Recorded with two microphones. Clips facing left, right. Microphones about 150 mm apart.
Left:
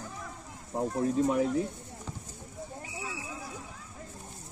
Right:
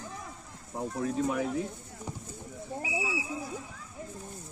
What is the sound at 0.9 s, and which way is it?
Speech, 35° left (ahead or behind).